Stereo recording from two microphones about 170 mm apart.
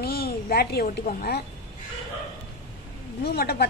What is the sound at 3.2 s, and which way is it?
Speech, 65° left (ahead or behind).